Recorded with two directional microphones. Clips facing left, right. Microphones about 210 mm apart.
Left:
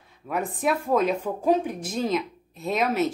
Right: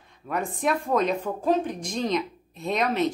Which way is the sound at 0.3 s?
5° left (ahead or behind).